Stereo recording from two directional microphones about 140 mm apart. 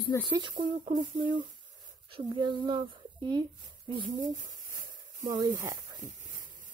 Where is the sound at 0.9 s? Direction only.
65° right (ahead or behind).